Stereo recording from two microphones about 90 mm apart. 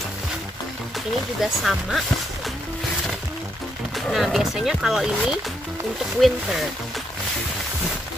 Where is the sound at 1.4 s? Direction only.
Centre (ahead or behind).